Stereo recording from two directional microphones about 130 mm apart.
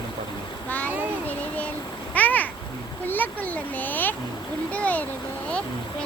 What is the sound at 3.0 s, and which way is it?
Speech, 15° left (ahead or behind).